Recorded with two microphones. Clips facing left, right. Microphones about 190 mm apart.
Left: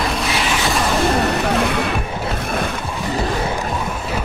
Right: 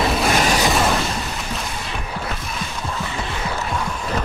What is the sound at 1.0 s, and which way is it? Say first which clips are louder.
Music: left 10 dB; 65° left (ahead or behind).